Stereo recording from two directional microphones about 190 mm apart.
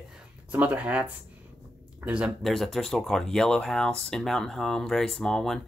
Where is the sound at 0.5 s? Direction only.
10° right (ahead or behind).